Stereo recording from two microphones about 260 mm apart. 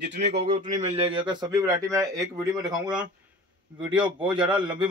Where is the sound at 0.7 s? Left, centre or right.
Right.